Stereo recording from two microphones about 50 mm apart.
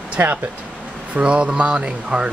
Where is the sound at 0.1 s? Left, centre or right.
Right.